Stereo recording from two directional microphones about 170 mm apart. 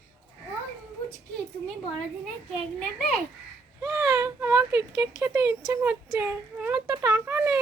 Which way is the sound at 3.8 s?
20° right (ahead or behind).